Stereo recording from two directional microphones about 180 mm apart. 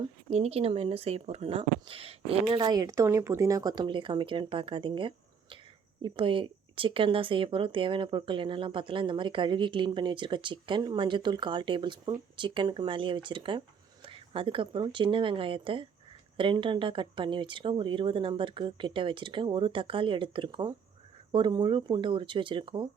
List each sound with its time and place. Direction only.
0.0 s speech: 35° right (ahead or behind)